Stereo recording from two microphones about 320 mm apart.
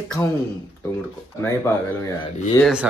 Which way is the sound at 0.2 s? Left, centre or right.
Centre.